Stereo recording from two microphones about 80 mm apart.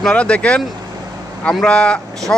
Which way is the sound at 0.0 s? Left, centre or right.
Centre.